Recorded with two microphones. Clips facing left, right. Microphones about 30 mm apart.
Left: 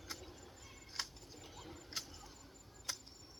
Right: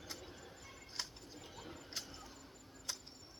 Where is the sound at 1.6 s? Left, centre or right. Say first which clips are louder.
Right 2 dB; right.